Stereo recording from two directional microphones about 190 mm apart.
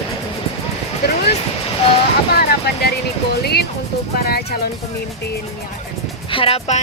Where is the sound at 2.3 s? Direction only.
55° left (ahead or behind).